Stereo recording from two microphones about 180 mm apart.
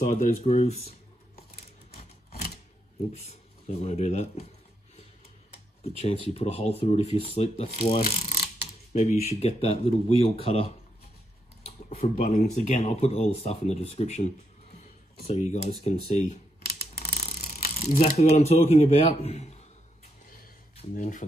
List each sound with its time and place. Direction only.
0.0 s speech: 45° left (ahead or behind)
2.0 s scissors: 60° left (ahead or behind)
3.1 s speech: 35° left (ahead or behind)
5.9 s speech: 35° left (ahead or behind)
8.0 s mechanisms: 50° left (ahead or behind)
9.2 s speech: 35° left (ahead or behind)
16.1 s camera: 35° left (ahead or behind)
16.9 s a sound: 60° left (ahead or behind)
17.2 s mechanisms: 50° left (ahead or behind)
17.7 s speech: 40° left (ahead or behind)
20.9 s speech: 45° left (ahead or behind)